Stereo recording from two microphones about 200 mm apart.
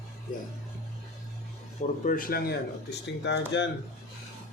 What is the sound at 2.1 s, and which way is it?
Speech, 45° left (ahead or behind).